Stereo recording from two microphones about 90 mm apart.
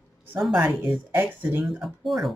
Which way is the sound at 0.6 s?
20° right (ahead or behind).